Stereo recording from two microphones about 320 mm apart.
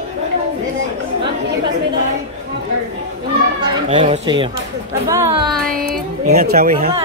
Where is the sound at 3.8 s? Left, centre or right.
Centre.